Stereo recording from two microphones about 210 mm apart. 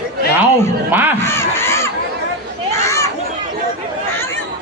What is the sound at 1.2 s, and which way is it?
Speech, 10° left (ahead or behind).